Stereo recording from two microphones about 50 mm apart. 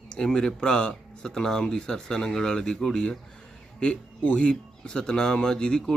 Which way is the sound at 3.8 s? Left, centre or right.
Left.